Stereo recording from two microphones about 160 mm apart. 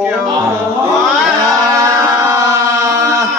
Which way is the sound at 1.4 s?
20° right (ahead or behind).